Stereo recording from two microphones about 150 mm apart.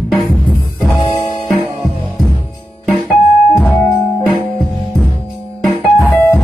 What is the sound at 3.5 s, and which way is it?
Music, 15° left (ahead or behind).